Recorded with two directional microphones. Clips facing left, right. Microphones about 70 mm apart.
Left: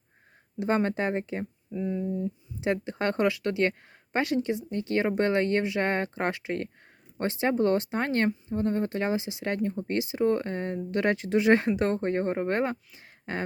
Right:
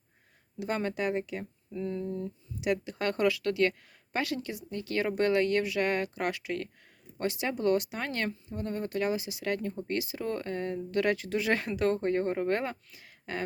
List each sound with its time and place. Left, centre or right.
0.6 s speech: left
1.7 s speech: centre
2.6 s speech: left